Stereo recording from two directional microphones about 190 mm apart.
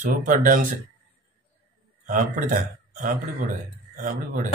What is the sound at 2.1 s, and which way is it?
A man's voice, 45° right (ahead or behind).